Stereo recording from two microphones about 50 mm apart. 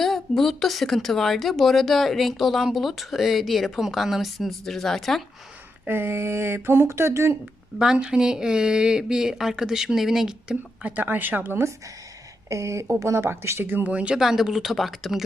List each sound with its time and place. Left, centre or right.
0.0 s speech: centre
5.9 s speech: right
7.9 s speech: centre
10.8 s speech: right
12.5 s speech: right
13.2 s speech: right
13.8 s speech: right
14.2 s speech: centre